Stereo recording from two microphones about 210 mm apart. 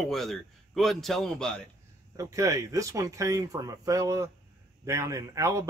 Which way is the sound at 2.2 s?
15° right (ahead or behind).